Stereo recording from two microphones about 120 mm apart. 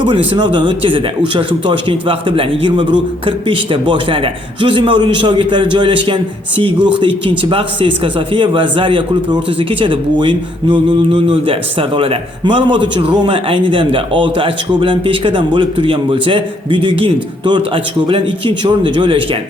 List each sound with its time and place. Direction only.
0.3 s speech: 40° right (ahead or behind)
6.7 s speech: 10° right (ahead or behind)
7.3 s speech: 45° right (ahead or behind)